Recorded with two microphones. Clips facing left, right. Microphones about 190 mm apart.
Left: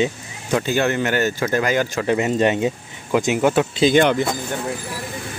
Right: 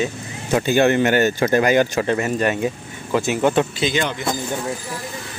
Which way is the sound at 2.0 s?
20° left (ahead or behind).